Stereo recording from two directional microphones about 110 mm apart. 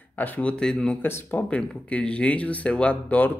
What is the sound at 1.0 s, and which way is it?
Speech, 20° left (ahead or behind).